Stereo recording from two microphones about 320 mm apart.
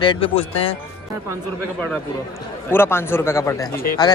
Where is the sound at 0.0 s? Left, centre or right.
Centre.